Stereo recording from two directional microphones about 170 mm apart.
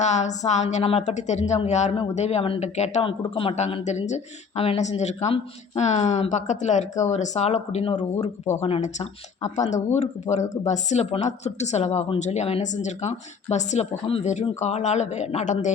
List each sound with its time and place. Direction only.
0.0 s speech: 45° left (ahead or behind)